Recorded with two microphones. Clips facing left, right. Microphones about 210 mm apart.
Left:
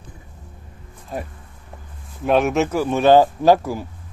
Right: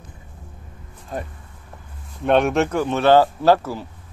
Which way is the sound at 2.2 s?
Centre (ahead or behind).